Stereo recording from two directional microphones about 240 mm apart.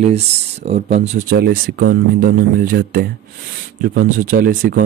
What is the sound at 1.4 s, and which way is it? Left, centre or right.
Speech, right.